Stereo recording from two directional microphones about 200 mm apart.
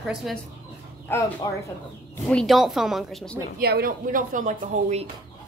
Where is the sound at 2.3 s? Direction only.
Centre (ahead or behind).